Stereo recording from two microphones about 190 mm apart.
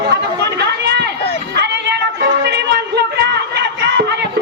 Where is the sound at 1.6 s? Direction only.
65° right (ahead or behind).